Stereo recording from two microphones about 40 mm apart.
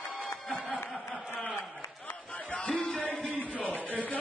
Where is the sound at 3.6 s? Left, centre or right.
Left.